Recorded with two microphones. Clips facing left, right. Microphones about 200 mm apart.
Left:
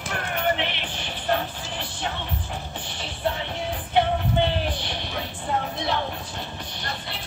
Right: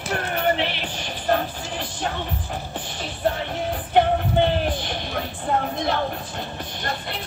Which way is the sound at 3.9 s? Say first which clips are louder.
Right 3 dB; 45° right (ahead or behind).